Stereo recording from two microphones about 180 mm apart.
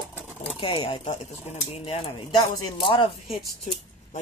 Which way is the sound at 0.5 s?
30° left (ahead or behind).